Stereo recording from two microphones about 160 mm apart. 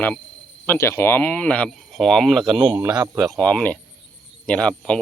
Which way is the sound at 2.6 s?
25° right (ahead or behind).